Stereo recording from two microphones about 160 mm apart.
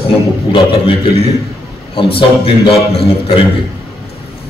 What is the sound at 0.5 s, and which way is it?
A man's voice, 35° left (ahead or behind).